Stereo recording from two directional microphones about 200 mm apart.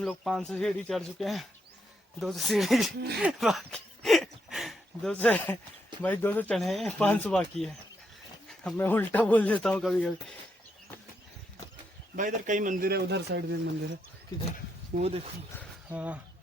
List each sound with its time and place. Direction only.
0.0 s speech: centre (ahead or behind)
12.1 s speech: 40° right (ahead or behind); by 13.6 s 60° right (ahead or behind)
14.9 s speech: 30° right (ahead or behind)
15.9 s speech: 5° right (ahead or behind)